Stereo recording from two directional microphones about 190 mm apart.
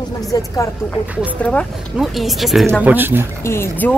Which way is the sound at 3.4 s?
15° left (ahead or behind).